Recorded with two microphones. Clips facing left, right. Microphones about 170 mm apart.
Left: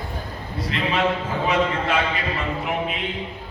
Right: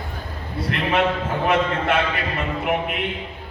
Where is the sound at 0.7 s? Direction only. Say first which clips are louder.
Right 3 dB; 55° right (ahead or behind).